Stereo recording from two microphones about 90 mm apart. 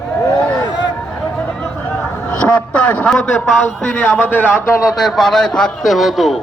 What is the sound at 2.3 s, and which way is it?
A man's voice, 15° left (ahead or behind).